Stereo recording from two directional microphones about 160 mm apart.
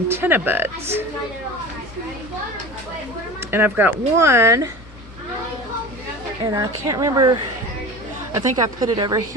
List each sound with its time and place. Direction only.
0.1 s speech: 15° right (ahead or behind)
3.5 s speech: 15° right (ahead or behind)
6.5 s a woman's voice: 20° right (ahead or behind)